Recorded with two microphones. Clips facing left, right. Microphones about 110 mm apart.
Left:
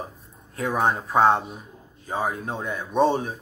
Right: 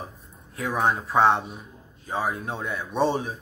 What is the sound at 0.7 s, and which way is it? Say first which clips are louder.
Speech: left 1 dB; 45° left (ahead or behind).